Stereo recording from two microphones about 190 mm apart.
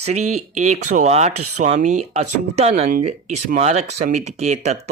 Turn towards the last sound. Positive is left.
turn(degrees=-35)  # may be behind; listen again after turning